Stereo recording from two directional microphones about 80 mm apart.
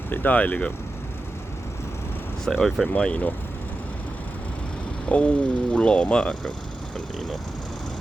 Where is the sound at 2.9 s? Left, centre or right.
Centre.